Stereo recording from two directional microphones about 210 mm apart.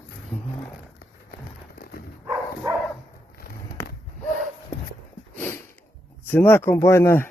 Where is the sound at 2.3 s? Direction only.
10° right (ahead or behind).